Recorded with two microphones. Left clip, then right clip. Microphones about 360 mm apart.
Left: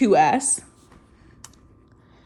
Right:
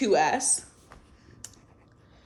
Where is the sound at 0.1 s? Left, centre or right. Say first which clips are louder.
Left 3 dB; centre.